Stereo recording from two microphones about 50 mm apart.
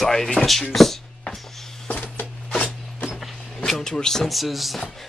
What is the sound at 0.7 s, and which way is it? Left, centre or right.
Speech, centre.